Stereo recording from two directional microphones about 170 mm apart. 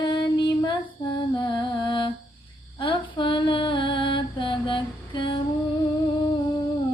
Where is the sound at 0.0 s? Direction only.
25° left (ahead or behind).